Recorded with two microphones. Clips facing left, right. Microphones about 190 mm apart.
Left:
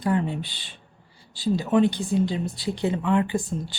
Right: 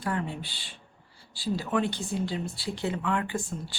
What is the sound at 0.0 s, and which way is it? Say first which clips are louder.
A woman's voice: left 7 dB; 20° left (ahead or behind).